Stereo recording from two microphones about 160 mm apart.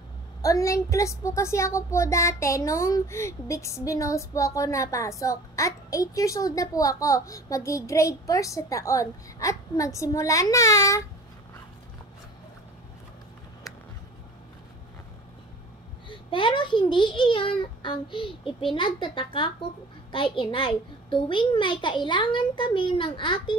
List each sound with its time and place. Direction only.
0.4 s a child's voice: 20° left (ahead or behind)
16.1 s a child's voice: 30° left (ahead or behind)